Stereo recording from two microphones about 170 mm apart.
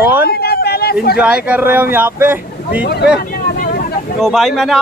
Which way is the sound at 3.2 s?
55° left (ahead or behind).